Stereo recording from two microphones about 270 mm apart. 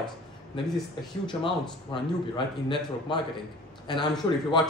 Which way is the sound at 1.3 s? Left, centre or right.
Centre.